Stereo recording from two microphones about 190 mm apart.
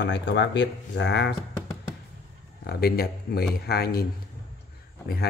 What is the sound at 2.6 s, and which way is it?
Speech, 55° left (ahead or behind).